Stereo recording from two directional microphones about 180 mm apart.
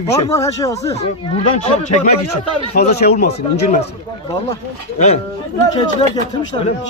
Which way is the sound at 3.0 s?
60° left (ahead or behind).